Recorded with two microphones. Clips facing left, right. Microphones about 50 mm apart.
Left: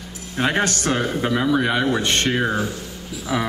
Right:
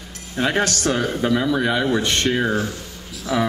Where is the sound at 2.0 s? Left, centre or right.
Left.